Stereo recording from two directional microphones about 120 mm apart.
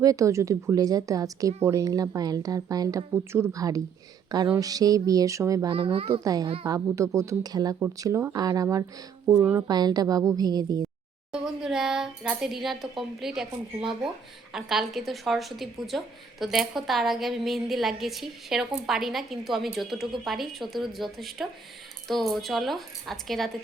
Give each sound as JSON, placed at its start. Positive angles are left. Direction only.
{"t": 0.0, "sound": "a woman's voice", "side_deg": -30}
{"t": 5.6, "sound": "speech", "side_deg": -50}
{"t": 6.2, "sound": "a woman's voice", "side_deg": -30}
{"t": 9.6, "sound": "a woman's voice", "side_deg": -35}
{"t": 11.3, "sound": "a woman's voice", "side_deg": -5}
{"t": 14.5, "sound": "a woman's voice", "side_deg": -5}